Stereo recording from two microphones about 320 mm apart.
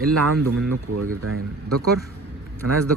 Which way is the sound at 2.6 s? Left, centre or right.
Right.